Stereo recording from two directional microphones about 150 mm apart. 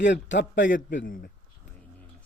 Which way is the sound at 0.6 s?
65° left (ahead or behind).